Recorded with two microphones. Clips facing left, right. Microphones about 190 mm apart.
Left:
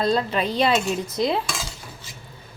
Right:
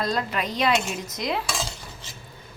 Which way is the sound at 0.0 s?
30° left (ahead or behind).